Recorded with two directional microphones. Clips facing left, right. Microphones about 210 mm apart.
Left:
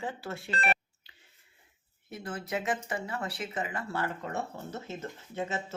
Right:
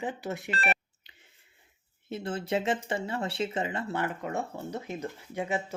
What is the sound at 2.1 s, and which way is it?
Speech, 25° right (ahead or behind).